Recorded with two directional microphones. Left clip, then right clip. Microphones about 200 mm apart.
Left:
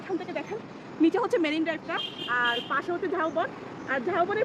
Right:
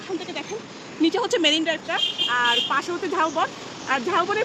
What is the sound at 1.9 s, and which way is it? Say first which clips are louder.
Speech: right 7 dB; 45° right (ahead or behind).